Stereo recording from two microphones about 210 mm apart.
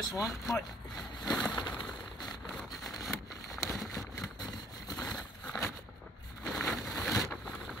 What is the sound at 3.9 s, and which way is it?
Vehicle, 15° left (ahead or behind).